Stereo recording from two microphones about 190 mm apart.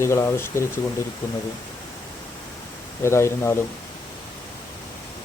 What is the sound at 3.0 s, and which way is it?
Speech, 15° left (ahead or behind).